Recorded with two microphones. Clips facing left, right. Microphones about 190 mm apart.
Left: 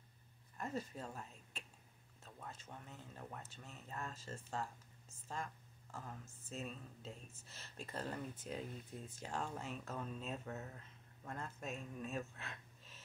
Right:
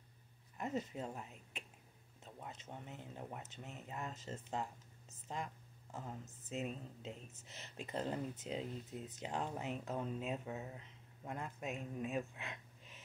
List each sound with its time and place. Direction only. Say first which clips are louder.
0.6 s a woman's voice: right 3 dB; 20° right (ahead or behind)